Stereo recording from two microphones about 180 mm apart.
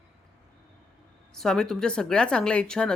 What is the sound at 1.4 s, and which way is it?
Speech, 5° left (ahead or behind).